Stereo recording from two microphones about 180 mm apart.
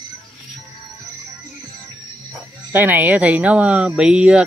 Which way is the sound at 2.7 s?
10° right (ahead or behind).